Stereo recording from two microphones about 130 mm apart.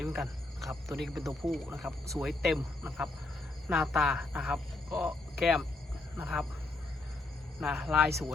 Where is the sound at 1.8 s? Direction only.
20° right (ahead or behind).